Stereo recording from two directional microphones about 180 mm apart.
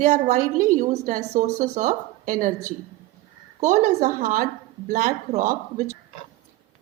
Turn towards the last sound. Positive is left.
turn(degrees=-50)  # may be behind; listen again after turning